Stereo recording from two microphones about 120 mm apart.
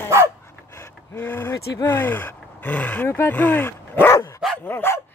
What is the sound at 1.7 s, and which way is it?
Speech, 20° left (ahead or behind).